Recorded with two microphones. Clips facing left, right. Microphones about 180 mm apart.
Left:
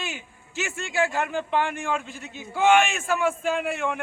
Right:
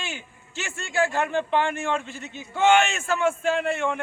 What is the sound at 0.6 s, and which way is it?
Speech, 5° left (ahead or behind).